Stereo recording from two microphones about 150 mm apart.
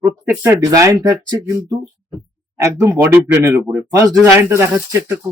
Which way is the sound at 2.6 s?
20° right (ahead or behind).